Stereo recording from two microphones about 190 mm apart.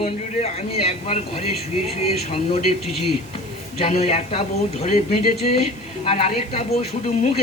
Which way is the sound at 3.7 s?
35° left (ahead or behind).